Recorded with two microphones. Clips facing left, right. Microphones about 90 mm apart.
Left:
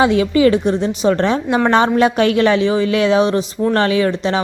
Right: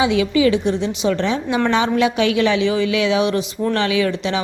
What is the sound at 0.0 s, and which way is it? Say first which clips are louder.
Speech: left 3 dB; 45° left (ahead or behind).